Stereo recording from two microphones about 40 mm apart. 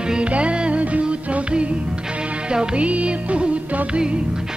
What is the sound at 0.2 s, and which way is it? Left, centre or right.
Music, right.